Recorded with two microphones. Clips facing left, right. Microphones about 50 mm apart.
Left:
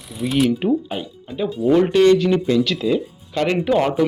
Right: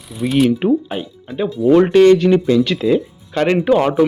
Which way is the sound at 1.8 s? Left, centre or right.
Right.